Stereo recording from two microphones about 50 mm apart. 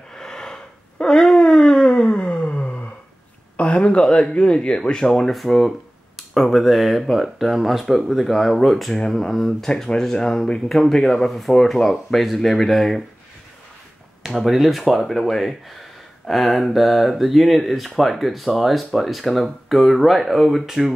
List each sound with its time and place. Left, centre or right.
0.1 s a sound: centre
3.5 s speech: left
5.3 s speech: centre
14.2 s speech: centre